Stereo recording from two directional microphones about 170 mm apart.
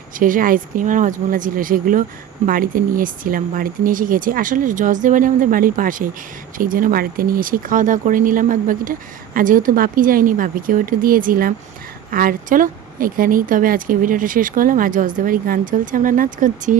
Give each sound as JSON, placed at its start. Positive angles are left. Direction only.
{"t": 0.2, "sound": "speech", "side_deg": -55}